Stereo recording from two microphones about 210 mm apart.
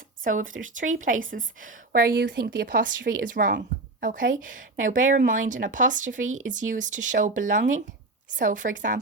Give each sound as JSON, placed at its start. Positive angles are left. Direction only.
{"t": 0.4, "sound": "speech", "side_deg": -70}
{"t": 0.8, "sound": "a woman's voice", "side_deg": -40}
{"t": 6.1, "sound": "speech", "side_deg": -70}
{"t": 6.5, "sound": "a woman's voice", "side_deg": -35}